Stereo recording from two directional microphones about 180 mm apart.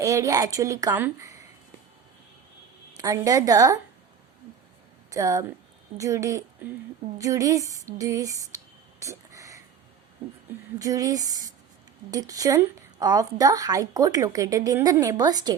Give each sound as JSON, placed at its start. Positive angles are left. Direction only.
{"t": 0.0, "sound": "a woman's voice", "side_deg": -20}
{"t": 3.0, "sound": "a woman's voice", "side_deg": -20}
{"t": 5.1, "sound": "a woman's voice", "side_deg": -20}
{"t": 10.8, "sound": "a woman's voice", "side_deg": -20}